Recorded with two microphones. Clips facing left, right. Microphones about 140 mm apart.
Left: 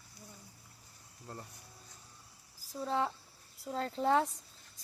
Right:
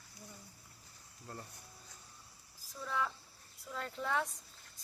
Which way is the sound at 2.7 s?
30° left (ahead or behind).